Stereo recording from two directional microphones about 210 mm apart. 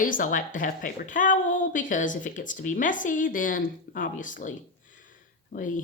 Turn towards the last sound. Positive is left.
turn(degrees=35)  # may be behind; listen again after turning